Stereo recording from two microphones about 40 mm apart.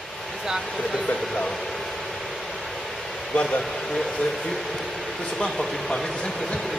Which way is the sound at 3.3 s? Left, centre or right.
Left.